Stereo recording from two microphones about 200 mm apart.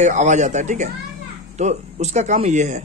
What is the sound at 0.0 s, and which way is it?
A man's voice, 35° right (ahead or behind).